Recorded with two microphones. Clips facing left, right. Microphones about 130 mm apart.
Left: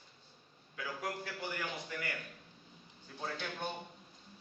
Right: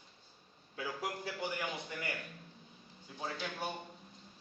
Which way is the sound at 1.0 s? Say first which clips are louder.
Right 1 dB; 15° right (ahead or behind).